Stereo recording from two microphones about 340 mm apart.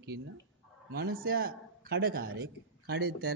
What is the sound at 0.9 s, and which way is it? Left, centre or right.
A man's voice, right.